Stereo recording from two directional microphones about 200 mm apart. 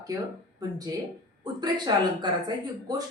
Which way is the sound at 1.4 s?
20° right (ahead or behind).